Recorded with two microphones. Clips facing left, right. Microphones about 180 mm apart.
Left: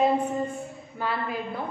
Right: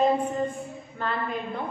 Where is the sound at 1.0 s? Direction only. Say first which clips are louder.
Even; 5° left (ahead or behind).